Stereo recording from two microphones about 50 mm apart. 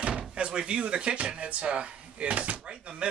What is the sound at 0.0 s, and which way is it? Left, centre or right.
Speech, centre.